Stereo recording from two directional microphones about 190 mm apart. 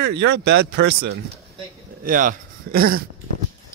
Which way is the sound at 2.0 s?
45° right (ahead or behind).